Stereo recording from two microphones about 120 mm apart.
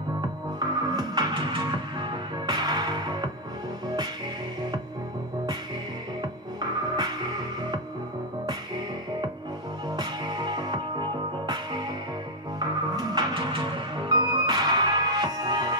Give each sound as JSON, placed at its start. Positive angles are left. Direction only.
{"t": 0.6, "sound": "music", "side_deg": -35}
{"t": 6.6, "sound": "music", "side_deg": -35}
{"t": 9.8, "sound": "music", "side_deg": -35}